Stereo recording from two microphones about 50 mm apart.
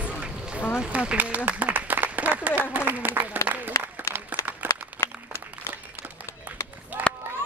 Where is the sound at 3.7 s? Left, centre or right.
Left.